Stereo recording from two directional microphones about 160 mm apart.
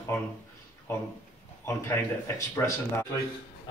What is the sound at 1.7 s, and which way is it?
Speech, 15° left (ahead or behind).